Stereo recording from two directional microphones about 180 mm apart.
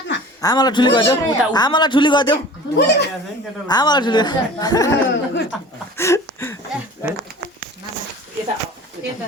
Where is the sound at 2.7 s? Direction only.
65° left (ahead or behind).